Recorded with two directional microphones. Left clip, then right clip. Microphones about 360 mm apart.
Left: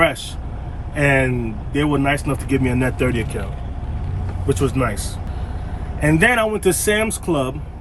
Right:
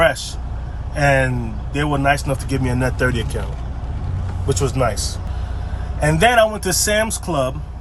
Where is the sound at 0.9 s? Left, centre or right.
Right.